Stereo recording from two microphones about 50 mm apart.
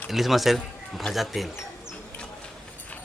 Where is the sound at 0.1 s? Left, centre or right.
Centre.